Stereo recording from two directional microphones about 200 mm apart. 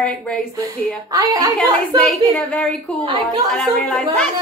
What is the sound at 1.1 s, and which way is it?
Speech, 20° right (ahead or behind).